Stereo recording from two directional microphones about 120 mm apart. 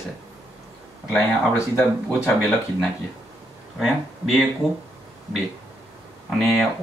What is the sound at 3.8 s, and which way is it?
Speech, centre (ahead or behind).